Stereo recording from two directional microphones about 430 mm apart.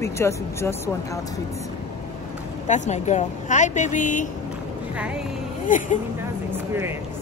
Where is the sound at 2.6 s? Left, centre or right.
Centre.